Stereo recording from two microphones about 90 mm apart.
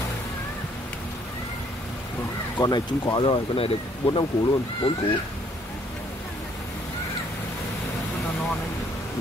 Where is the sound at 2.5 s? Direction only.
50° left (ahead or behind); by 3.7 s 80° left.